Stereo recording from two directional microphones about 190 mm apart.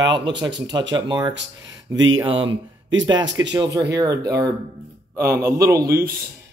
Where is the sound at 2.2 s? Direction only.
30° right (ahead or behind).